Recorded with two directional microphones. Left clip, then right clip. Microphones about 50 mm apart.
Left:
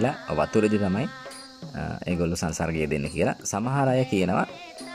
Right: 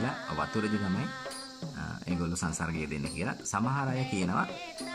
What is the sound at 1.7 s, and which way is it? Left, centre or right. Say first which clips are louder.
Speech: left 9 dB; left.